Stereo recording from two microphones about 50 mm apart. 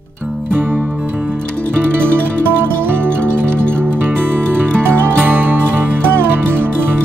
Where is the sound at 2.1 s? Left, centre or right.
Right.